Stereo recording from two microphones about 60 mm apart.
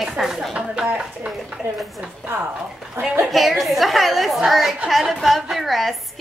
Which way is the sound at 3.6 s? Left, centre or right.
Centre.